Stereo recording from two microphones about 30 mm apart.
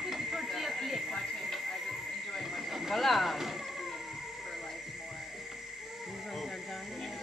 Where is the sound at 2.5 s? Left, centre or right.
Centre.